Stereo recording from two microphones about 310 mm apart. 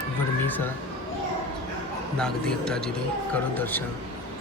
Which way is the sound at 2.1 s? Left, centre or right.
Centre.